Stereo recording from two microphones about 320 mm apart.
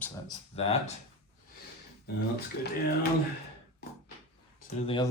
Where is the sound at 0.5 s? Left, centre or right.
Centre.